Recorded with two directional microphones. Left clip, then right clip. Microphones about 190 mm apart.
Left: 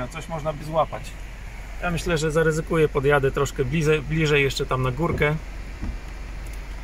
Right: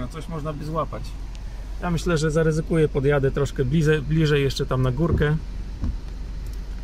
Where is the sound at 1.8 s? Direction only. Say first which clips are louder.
Even; 25° right (ahead or behind); by 5.3 s 10° right (ahead or behind).